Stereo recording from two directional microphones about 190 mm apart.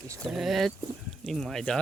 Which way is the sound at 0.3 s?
Centre (ahead or behind).